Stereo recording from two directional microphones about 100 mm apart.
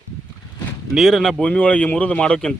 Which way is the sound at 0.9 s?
Centre (ahead or behind).